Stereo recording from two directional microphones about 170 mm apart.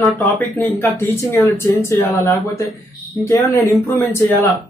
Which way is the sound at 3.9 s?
15° left (ahead or behind).